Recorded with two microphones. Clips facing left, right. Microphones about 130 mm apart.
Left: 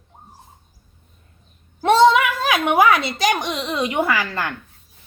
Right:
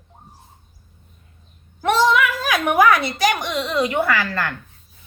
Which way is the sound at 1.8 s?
25° left (ahead or behind).